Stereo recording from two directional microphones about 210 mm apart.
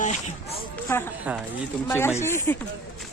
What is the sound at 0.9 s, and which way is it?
Speech, 10° left (ahead or behind).